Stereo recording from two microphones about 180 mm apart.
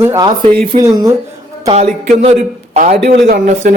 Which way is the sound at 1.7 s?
35° right (ahead or behind).